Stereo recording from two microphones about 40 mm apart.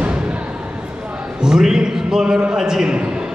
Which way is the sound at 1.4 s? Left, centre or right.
Centre.